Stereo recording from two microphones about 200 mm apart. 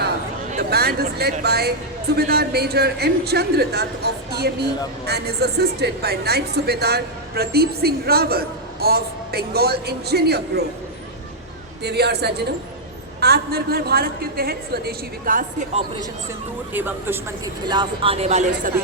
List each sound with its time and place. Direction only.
0.7 s speech: 50° right (ahead or behind)
11.8 s a man's voice: 55° right (ahead or behind)
16.7 s speech: 10° right (ahead or behind)
17.7 s speech: 25° right (ahead or behind)